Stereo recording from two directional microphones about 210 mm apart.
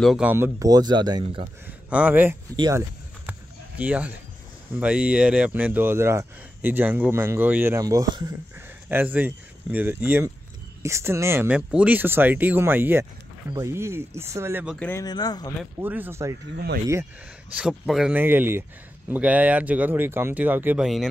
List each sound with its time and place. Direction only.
0.0 s speech: 5° right (ahead or behind); by 1.4 s 20° right (ahead or behind)
1.7 s speech: 5° right (ahead or behind)
2.5 s speech: 20° right (ahead or behind)
3.3 s a sound: 5° right (ahead or behind)
4.7 s speech: 5° right (ahead or behind)
14.8 s speech: 10° left (ahead or behind)
15.8 s speech: 10° right (ahead or behind)
17.6 s speech: 5° right (ahead or behind)